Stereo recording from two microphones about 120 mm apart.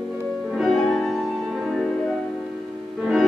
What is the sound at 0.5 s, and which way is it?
Music, centre (ahead or behind).